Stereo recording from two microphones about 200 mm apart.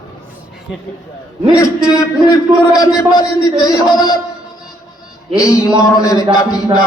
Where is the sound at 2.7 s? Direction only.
20° left (ahead or behind).